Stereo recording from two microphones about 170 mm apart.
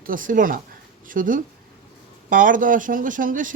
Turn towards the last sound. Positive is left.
turn(degrees=-50)  # may be behind; listen again after turning